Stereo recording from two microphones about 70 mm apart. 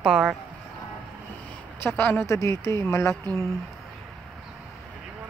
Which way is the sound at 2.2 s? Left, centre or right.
Left.